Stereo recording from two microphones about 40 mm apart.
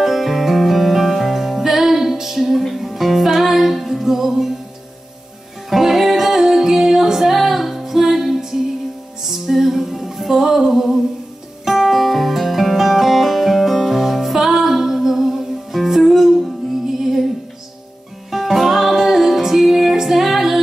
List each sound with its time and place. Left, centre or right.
0.0 s music: centre
5.7 s music: centre
18.3 s music: centre